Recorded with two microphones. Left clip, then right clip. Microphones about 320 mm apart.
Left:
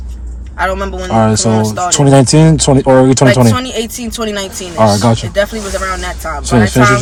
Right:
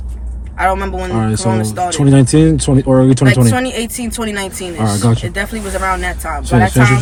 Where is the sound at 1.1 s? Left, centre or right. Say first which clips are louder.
Left 8 dB; left.